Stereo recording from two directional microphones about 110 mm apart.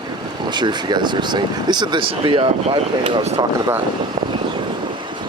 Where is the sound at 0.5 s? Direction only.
45° right (ahead or behind).